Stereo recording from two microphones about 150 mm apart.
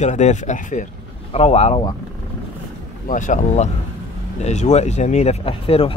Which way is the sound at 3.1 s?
55° left (ahead or behind).